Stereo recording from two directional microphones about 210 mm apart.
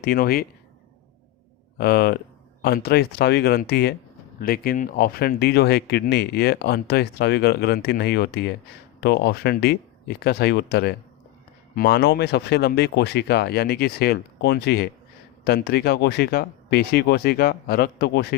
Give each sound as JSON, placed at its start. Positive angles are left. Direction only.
{"t": 0.0, "sound": "speech", "side_deg": 45}
{"t": 1.8, "sound": "speech", "side_deg": 50}